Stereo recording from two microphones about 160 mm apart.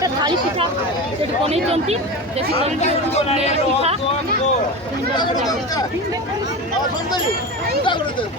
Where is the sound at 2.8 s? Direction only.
45° left (ahead or behind).